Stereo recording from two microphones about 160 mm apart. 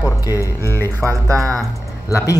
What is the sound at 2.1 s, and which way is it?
Speech, 20° left (ahead or behind).